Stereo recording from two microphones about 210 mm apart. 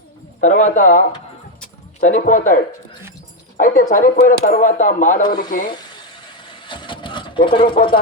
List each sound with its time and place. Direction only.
0.4 s speech: 35° left (ahead or behind)
3.6 s speech: 40° left (ahead or behind)
6.7 s vehicle: 20° left (ahead or behind)